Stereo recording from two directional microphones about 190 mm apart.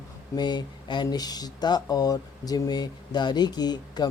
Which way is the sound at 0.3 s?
20° left (ahead or behind).